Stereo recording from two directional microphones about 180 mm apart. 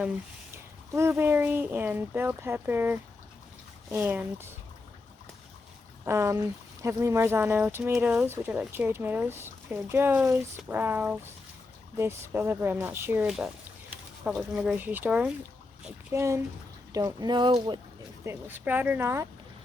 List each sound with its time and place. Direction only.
0.9 s speech: 15° right (ahead or behind)
6.1 s speech: 15° right (ahead or behind)
18.3 s speech: 10° right (ahead or behind)